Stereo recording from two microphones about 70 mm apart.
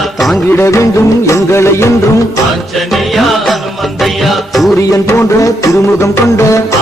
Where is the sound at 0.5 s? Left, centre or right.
Left.